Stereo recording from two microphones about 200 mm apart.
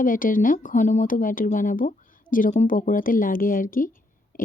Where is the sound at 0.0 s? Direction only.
40° left (ahead or behind).